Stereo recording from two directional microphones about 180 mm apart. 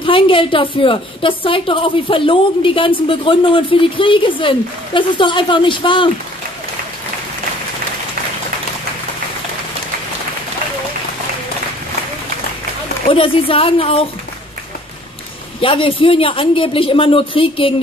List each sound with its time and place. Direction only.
0.0 s a woman's voice: 30° left (ahead or behind)
13.1 s a woman's voice: 30° left (ahead or behind)
15.6 s a woman's voice: 30° left (ahead or behind)